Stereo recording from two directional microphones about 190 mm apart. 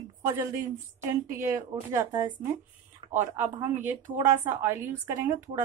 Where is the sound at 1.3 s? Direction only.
15° right (ahead or behind).